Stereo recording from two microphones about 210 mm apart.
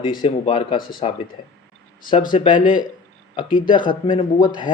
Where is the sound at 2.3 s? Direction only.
20° left (ahead or behind).